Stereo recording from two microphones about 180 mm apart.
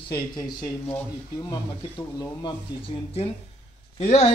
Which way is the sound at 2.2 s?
30° left (ahead or behind).